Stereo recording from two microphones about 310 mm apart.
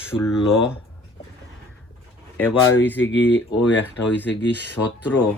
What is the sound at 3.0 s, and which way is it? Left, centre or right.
Speech, left.